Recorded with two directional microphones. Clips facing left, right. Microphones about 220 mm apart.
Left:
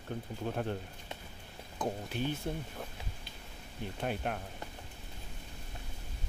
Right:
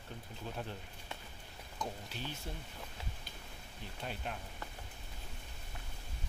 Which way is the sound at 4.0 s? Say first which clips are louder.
Left 7 dB; 55° left (ahead or behind).